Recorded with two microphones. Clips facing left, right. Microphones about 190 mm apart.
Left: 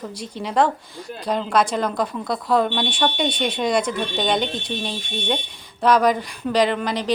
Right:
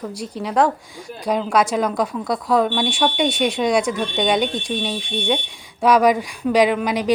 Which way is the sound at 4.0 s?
Centre (ahead or behind).